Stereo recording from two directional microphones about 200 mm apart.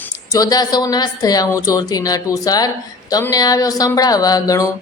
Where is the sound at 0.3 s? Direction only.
15° left (ahead or behind).